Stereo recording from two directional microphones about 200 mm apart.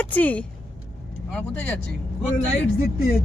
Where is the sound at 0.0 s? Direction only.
10° left (ahead or behind).